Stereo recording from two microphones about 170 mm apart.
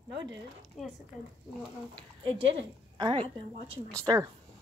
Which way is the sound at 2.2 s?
30° right (ahead or behind).